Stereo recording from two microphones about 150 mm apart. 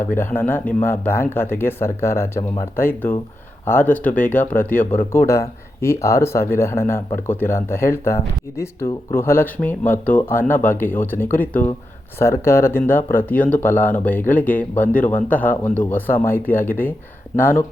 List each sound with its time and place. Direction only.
0.0 s speech: 15° left (ahead or behind)